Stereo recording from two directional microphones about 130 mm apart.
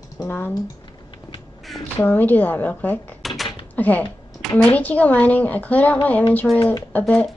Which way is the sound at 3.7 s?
10° left (ahead or behind).